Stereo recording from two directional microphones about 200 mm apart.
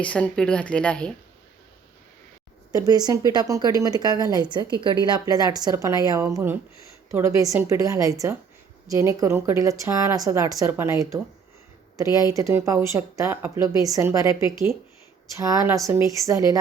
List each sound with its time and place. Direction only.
0.0 s a woman's voice: 5° left (ahead or behind)
2.8 s speech: 20° right (ahead or behind)
12.3 s speech: 15° right (ahead or behind)